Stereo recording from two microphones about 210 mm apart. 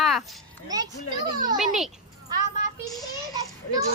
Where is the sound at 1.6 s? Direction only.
Centre (ahead or behind).